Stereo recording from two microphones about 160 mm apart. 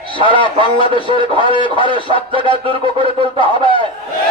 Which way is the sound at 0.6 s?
35° left (ahead or behind).